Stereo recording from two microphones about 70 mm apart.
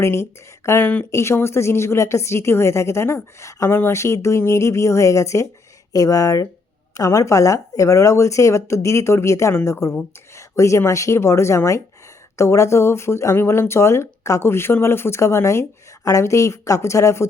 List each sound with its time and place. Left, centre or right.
0.0 s speech: left
0.8 s speech: left
1.1 s speech: left
5.9 s speech: left